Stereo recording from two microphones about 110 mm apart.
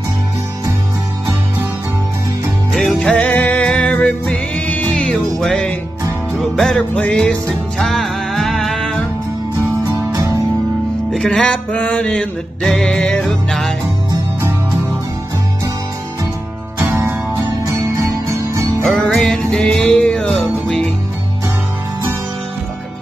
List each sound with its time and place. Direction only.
2.7 s music: centre (ahead or behind)
3.0 s music: 10° left (ahead or behind)
9.9 s music: 30° right (ahead or behind)
11.1 s music: 5° left (ahead or behind)
16.8 s music: 25° right (ahead or behind)
18.9 s music: 5° left (ahead or behind)